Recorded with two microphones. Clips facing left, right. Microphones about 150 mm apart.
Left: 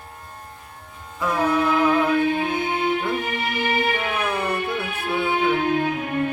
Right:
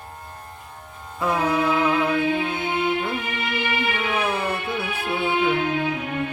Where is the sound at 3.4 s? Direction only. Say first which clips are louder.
Left 2 dB; 45° left (ahead or behind).